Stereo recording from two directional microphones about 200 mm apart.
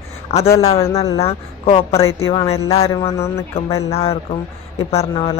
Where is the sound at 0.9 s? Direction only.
25° left (ahead or behind).